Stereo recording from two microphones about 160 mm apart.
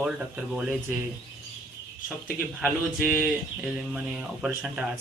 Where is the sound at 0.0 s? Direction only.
5° right (ahead or behind).